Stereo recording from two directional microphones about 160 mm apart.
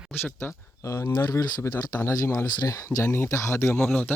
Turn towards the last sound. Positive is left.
turn(degrees=10)  # may be behind; listen again after turning